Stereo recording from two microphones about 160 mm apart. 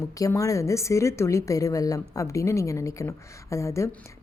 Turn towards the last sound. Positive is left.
turn(degrees=20)  # may be behind; listen again after turning